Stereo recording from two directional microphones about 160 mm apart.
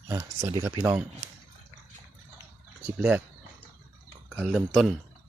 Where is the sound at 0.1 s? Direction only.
20° right (ahead or behind).